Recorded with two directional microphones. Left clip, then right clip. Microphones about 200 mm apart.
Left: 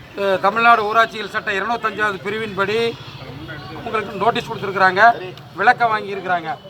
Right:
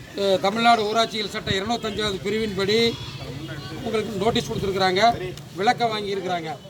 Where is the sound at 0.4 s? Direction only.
25° right (ahead or behind).